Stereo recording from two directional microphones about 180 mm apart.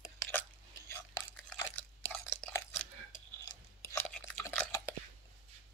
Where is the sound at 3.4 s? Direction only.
15° left (ahead or behind).